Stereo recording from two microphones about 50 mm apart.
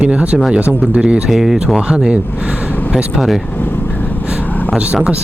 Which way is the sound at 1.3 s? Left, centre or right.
Centre.